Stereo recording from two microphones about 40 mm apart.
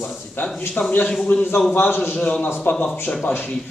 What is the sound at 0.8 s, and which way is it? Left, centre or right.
A man's voice, left.